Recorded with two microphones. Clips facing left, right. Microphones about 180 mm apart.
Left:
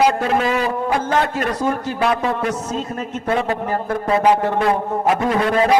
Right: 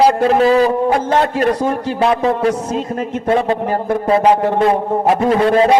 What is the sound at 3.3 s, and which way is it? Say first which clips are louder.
A man's voice: right 4 dB; 30° right (ahead or behind).